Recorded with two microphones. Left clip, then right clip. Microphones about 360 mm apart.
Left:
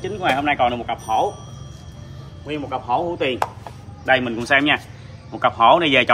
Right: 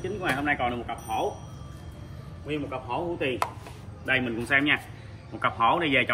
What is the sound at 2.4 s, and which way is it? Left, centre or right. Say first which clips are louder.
A man's voice: left 7 dB; centre.